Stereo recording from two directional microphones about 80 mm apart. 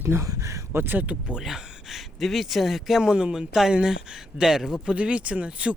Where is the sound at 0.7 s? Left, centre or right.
Right.